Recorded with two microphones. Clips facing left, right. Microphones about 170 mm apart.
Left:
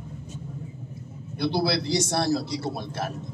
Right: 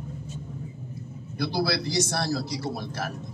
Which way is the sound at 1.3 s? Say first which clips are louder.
Left 2 dB; 25° left (ahead or behind).